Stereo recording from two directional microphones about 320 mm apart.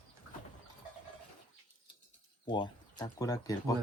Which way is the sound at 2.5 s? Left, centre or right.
Centre.